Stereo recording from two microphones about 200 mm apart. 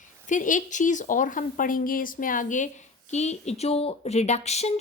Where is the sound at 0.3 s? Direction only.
40° left (ahead or behind).